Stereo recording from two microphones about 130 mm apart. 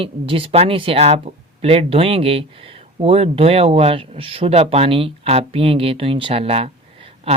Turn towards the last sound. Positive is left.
turn(degrees=-50)  # may be behind; listen again after turning